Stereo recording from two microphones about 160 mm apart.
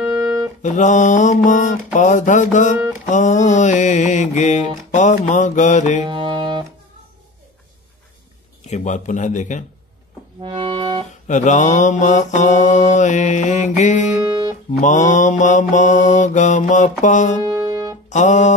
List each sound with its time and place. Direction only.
0.0 s music: 20° right (ahead or behind)
0.6 s mantra: 50° left (ahead or behind)
6.0 s music: 30° right (ahead or behind)
8.6 s mantra: 50° left (ahead or behind)
10.4 s music: 30° right (ahead or behind)
11.2 s mantra: 50° left (ahead or behind)
14.2 s guitar: 25° right (ahead or behind)
14.7 s mantra: 50° left (ahead or behind)
17.4 s music: 25° right (ahead or behind)
18.1 s mantra: 50° left (ahead or behind)